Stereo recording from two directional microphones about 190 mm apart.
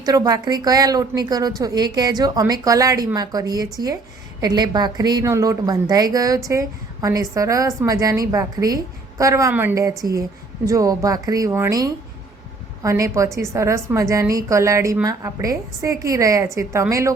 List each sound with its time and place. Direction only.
0.0 s a woman's voice: 20° right (ahead or behind)